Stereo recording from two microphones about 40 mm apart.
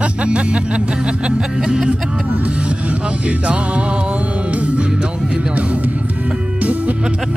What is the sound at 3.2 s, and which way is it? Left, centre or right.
Music, right.